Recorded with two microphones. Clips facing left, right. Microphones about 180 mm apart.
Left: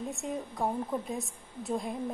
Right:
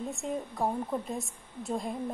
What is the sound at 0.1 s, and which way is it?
A woman's voice, centre (ahead or behind).